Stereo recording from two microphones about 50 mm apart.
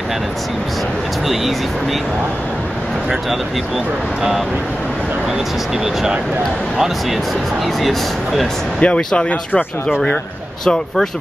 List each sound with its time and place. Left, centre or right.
1.2 s speech: centre
3.1 s speech: centre
8.8 s speech: left
10.6 s speech: centre